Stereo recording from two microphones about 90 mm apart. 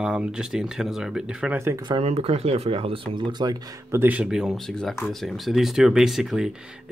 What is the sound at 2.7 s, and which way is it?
Speech, 90° right.